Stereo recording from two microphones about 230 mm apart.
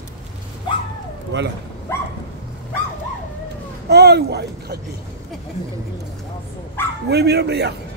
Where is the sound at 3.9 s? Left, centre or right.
Right.